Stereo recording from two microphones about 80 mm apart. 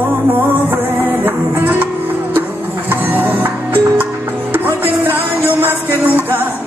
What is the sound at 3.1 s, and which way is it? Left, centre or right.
Music, right.